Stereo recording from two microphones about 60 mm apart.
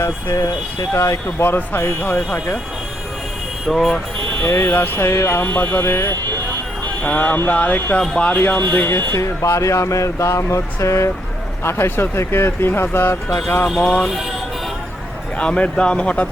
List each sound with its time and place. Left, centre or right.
0.0 s speech: left
1.5 s speech: left
3.7 s speech: centre
4.4 s speech: left
5.4 s speech: left
5.8 s speech: left
7.0 s speech: left
8.9 s speech: left
9.2 s speech: left
13.7 s speech: centre
15.4 s speech: centre